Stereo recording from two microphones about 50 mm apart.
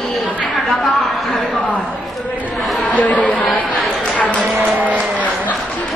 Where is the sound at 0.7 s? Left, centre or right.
Centre.